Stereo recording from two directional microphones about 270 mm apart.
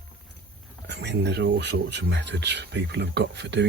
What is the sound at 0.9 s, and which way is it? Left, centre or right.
Speech, right.